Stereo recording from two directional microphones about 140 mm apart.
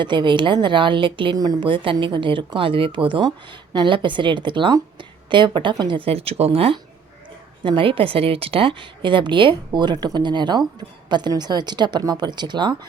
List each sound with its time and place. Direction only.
0.0 s a woman's voice: 35° right (ahead or behind)